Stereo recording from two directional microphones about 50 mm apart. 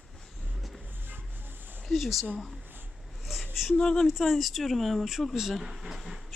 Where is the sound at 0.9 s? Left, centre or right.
Right.